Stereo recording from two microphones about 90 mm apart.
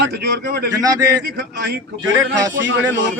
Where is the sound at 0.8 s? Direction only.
40° right (ahead or behind).